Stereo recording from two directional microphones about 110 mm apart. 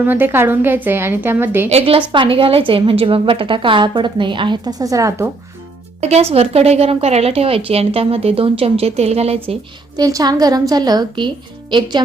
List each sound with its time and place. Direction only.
0.0 s a woman's voice: 15° right (ahead or behind)
2.0 s a woman's voice: 50° right (ahead or behind); by 5.3 s 25° right (ahead or behind)
6.0 s speech: 75° right (ahead or behind)
10.0 s a woman's voice: 35° right (ahead or behind)